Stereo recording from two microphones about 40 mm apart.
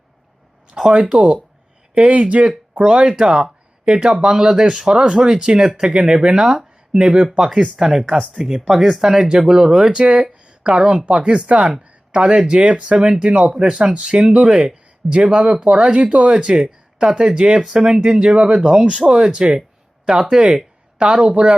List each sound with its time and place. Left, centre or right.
0.8 s speech: centre
2.0 s speech: right; by 10.0 s centre
10.0 s speech: right
10.3 s a sound: right
11.1 s speech: right
14.0 s speech: centre
15.1 s speech: right
21.0 s speech: right